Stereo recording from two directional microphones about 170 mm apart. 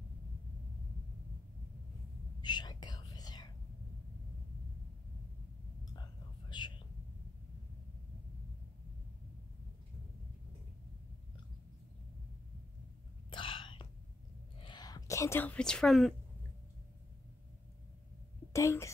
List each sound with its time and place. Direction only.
2.4 s whispering: 25° left (ahead or behind)
6.5 s whispering: 25° left (ahead or behind)
13.3 s whispering: 30° left (ahead or behind)
14.6 s speech: 25° left (ahead or behind); by 16.2 s centre (ahead or behind)
18.5 s a sound: 15° left (ahead or behind)